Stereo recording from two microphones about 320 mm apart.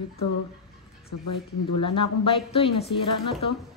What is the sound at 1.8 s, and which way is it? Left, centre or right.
Speech, centre.